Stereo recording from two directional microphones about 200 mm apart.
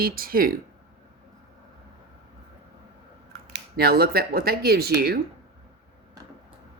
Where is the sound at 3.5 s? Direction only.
50° right (ahead or behind).